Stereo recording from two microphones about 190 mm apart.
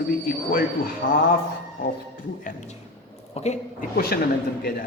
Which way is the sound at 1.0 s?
45° left (ahead or behind).